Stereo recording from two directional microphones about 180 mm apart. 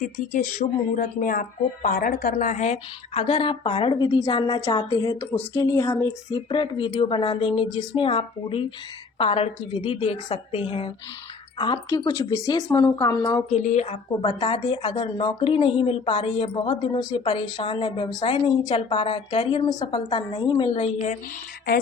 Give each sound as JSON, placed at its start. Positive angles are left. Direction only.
{"t": 0.0, "sound": "speech", "side_deg": 45}
{"t": 3.2, "sound": "a woman's voice", "side_deg": 30}
{"t": 13.5, "sound": "a woman's voice", "side_deg": 40}